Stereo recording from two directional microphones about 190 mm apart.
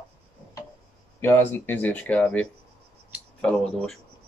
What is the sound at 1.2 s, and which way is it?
Speech, 10° left (ahead or behind).